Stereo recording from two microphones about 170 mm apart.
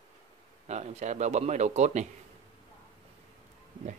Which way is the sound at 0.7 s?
40° right (ahead or behind).